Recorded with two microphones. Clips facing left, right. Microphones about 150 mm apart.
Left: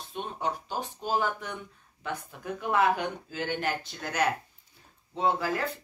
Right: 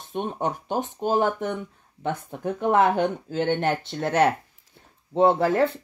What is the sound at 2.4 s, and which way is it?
Speech, 25° right (ahead or behind).